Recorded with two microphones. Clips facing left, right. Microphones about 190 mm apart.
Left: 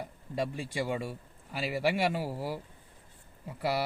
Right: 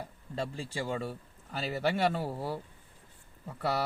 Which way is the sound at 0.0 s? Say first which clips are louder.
Left 3 dB; 15° left (ahead or behind).